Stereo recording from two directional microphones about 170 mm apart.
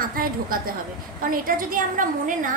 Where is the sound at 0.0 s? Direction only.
55° right (ahead or behind).